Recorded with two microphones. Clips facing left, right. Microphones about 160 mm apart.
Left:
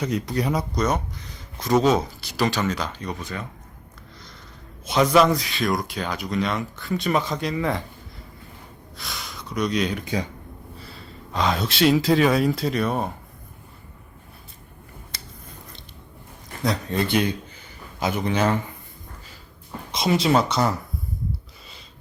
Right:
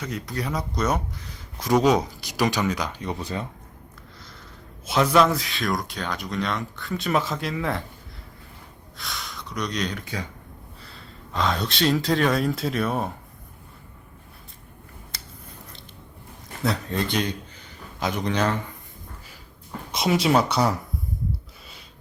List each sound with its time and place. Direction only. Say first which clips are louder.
0.0 s speech: left 6 dB; 20° left (ahead or behind)
0.8 s speech: left 1 dB; 5° right (ahead or behind)
3.1 s speech: right 2 dB; 30° right (ahead or behind)
4.9 s speech: left 2 dB; centre (ahead or behind)
9.0 s speech: even; centre (ahead or behind)
11.3 s speech: left 2 dB; centre (ahead or behind)
16.6 s speech: left 2 dB; centre (ahead or behind)
19.9 s speech: left 1 dB; 10° right (ahead or behind)